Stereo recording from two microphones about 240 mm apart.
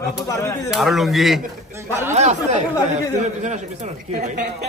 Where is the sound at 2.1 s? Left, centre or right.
Right.